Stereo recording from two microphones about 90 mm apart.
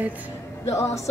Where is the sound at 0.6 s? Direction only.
40° left (ahead or behind).